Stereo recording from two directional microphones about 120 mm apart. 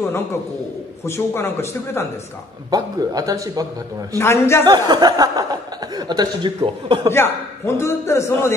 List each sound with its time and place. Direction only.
1.0 s a man's voice: 20° left (ahead or behind)
2.7 s a man's voice: 30° right (ahead or behind)
4.2 s a man's voice: 20° left (ahead or behind)
4.6 s speech: 35° right (ahead or behind)
7.1 s a man's voice: 20° left (ahead or behind)